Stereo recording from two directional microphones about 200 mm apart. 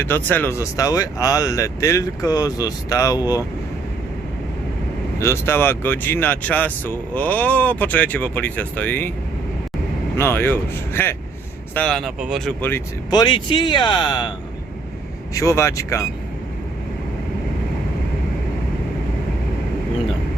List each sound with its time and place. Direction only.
0.0 s speech: 10° left (ahead or behind)
5.2 s speech: 10° left (ahead or behind)
10.2 s speech: 10° left (ahead or behind)
13.1 s speech: 20° left (ahead or behind)
15.4 s speech: 15° left (ahead or behind)